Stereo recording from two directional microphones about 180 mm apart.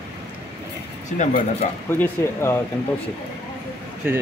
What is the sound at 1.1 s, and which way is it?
Speech, 45° left (ahead or behind).